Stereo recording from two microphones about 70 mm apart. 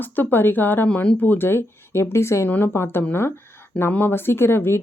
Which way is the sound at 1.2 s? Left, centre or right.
Left.